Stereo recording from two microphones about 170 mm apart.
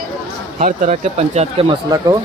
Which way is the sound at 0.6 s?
45° right (ahead or behind).